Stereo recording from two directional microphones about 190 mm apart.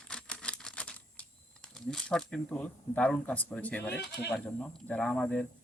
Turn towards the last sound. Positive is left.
turn(degrees=5)  # may be behind; listen again after turning